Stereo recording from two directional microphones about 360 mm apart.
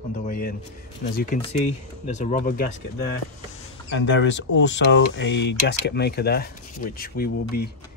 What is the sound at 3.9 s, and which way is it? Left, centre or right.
Speech, left.